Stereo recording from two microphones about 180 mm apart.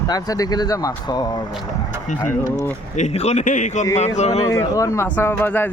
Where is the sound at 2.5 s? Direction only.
40° left (ahead or behind).